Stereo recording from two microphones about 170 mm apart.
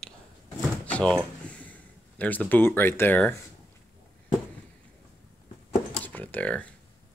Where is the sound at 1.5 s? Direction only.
10° left (ahead or behind).